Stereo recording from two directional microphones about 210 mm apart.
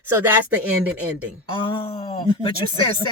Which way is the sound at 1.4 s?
25° left (ahead or behind).